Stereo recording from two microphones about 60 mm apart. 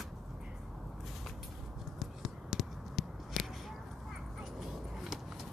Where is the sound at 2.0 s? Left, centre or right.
Centre.